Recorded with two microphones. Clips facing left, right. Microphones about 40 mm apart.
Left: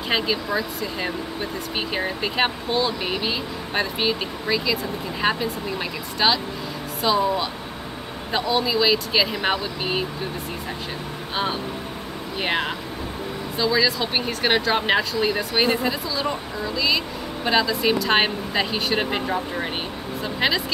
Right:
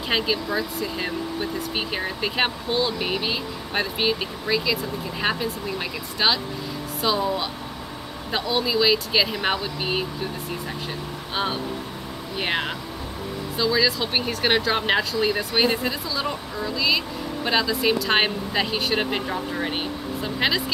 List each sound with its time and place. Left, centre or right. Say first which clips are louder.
0.1 s speech: left 1 dB; centre
8.3 s speech: left 2 dB; centre
12.4 s speech: left 1 dB; centre